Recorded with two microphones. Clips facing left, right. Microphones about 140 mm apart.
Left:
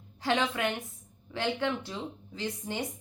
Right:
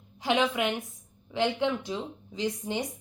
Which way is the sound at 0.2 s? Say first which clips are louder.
Right 3 dB; 15° right (ahead or behind).